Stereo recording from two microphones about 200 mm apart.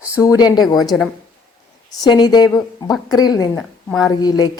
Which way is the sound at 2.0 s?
20° left (ahead or behind).